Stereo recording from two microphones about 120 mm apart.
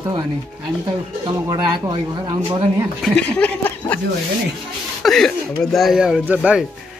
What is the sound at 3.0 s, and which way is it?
Speech, 10° left (ahead or behind).